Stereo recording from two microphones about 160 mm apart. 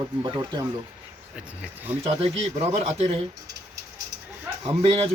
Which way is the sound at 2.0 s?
40° right (ahead or behind).